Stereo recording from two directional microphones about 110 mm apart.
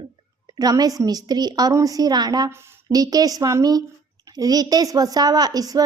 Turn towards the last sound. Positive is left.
turn(degrees=-35)  # may be behind; listen again after turning